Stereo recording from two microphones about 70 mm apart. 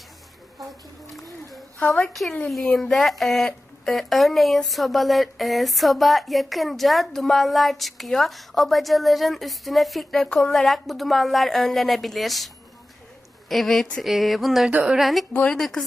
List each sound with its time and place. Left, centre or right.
2.5 s speech: centre
13.5 s speech: centre
14.7 s a woman's voice: centre
14.9 s a woman's voice: centre